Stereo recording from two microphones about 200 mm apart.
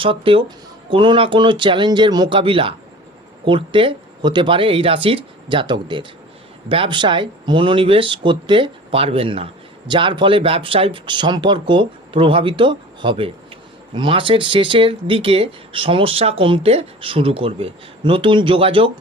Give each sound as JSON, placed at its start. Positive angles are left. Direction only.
{"t": 0.0, "sound": "speech", "side_deg": -25}